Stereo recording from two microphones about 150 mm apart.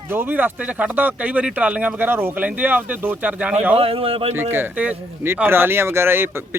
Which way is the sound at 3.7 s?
40° right (ahead or behind).